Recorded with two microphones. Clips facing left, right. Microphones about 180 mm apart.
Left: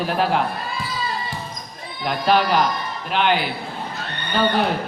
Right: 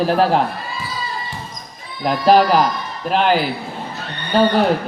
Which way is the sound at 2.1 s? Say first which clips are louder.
Right 6 dB; 40° right (ahead or behind).